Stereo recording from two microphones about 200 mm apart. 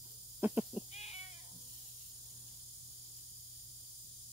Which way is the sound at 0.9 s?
30° left (ahead or behind).